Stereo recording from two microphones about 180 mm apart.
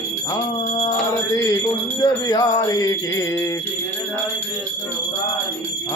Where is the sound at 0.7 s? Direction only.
25° left (ahead or behind).